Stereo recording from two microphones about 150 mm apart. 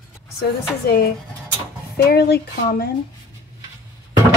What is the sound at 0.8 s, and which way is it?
A woman's voice, 90° left.